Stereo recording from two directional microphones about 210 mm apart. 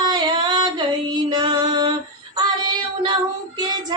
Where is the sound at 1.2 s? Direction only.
20° right (ahead or behind).